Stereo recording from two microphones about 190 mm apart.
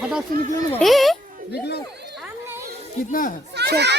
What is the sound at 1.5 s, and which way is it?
Speech, 60° left (ahead or behind).